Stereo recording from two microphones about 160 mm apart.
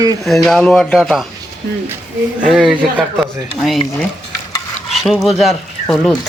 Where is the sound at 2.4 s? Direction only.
5° right (ahead or behind).